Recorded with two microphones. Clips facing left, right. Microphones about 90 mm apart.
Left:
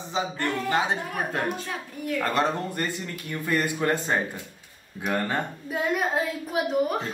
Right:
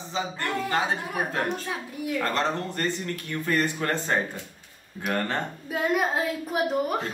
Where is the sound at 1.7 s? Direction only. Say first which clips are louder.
Right 1 dB; 10° right (ahead or behind).